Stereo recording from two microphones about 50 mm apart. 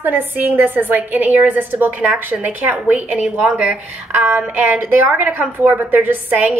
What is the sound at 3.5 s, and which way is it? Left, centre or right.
A woman's voice, right.